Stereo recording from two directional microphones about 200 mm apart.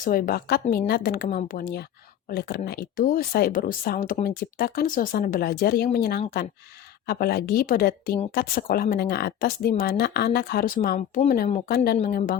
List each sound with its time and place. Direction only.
0.0 s speech: 45° left (ahead or behind)